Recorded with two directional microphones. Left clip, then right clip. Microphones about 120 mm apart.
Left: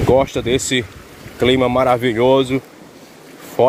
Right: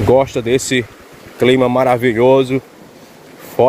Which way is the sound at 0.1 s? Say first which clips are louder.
Right 2 dB; 55° right (ahead or behind).